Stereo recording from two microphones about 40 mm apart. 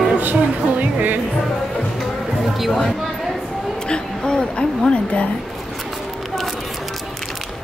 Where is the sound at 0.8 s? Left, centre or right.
Right.